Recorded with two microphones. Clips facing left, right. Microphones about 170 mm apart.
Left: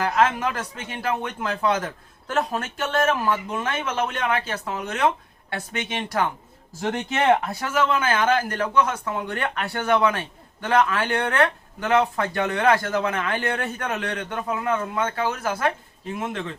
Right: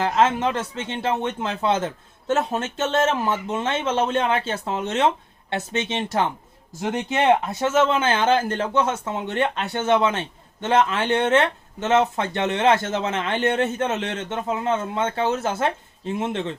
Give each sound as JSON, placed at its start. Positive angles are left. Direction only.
{"t": 0.0, "sound": "speech", "side_deg": -25}